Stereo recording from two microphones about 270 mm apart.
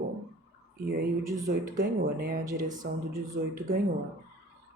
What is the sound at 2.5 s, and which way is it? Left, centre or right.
Speech, centre.